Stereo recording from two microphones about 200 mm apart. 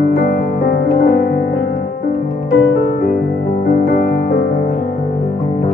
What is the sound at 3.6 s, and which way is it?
Music, 45° left (ahead or behind).